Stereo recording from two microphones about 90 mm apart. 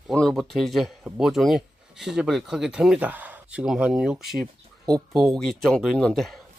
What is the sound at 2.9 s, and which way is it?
Speech, 15° right (ahead or behind).